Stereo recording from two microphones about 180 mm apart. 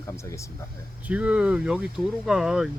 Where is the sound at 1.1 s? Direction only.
5° right (ahead or behind).